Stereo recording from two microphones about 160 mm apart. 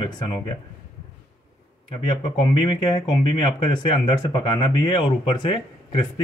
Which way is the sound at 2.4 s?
30° left (ahead or behind).